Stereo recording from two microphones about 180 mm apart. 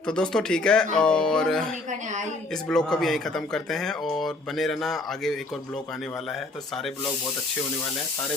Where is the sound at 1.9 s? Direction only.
40° right (ahead or behind).